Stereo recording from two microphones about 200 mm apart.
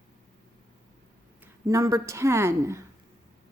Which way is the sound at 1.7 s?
15° right (ahead or behind).